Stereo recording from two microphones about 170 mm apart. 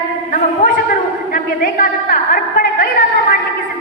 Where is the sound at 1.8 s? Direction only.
55° left (ahead or behind).